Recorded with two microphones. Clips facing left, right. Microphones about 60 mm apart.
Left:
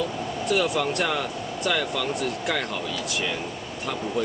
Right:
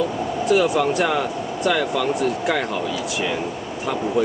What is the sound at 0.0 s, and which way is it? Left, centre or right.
Speech, centre.